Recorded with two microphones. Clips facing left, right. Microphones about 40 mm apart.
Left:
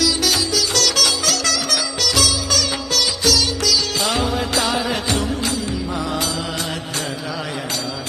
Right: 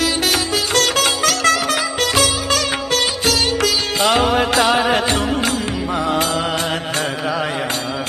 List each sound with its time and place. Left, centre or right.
0.0 s music: right